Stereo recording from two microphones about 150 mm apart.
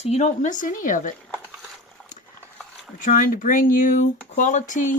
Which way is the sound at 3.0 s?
65° left (ahead or behind).